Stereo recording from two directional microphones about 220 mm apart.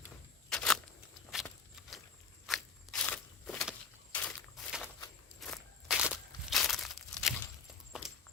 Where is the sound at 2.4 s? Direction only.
Centre (ahead or behind).